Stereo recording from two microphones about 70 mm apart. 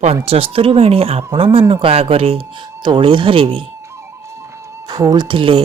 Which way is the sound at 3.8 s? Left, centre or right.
Right.